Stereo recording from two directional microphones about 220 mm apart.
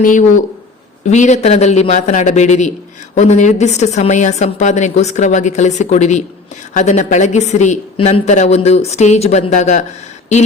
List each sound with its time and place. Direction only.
0.0 s a woman's voice: 35° left (ahead or behind)